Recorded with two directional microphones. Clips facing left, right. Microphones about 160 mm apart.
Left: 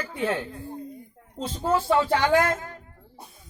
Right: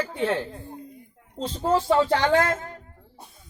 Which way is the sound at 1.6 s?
30° right (ahead or behind).